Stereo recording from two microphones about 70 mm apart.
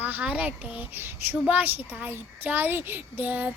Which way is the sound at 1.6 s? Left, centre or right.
Right.